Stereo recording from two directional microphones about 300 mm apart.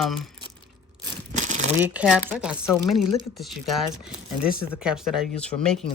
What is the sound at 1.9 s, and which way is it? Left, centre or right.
Speech, centre.